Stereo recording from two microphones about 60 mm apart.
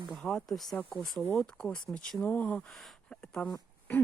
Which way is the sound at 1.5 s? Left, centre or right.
Centre.